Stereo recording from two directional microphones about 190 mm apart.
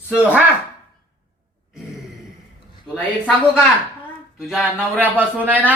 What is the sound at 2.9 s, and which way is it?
A man's voice, 5° left (ahead or behind).